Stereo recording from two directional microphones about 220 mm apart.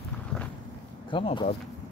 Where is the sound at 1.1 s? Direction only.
25° left (ahead or behind).